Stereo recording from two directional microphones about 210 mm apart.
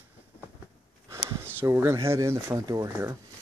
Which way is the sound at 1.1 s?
10° right (ahead or behind).